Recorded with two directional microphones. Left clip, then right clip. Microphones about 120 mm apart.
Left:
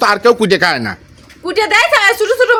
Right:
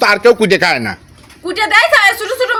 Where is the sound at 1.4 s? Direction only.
40° left (ahead or behind).